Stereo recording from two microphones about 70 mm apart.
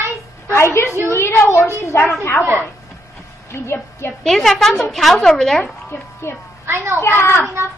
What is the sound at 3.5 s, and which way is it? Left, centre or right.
Speech, left.